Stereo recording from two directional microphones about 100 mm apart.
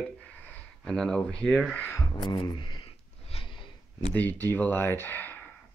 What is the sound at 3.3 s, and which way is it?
Snort, 65° left (ahead or behind).